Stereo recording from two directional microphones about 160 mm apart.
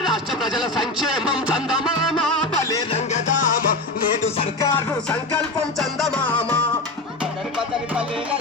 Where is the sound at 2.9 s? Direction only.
50° left (ahead or behind).